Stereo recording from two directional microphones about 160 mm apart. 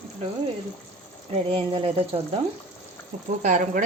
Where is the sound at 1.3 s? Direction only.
35° right (ahead or behind).